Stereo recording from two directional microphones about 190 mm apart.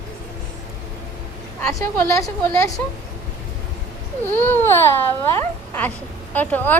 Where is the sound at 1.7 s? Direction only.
15° left (ahead or behind).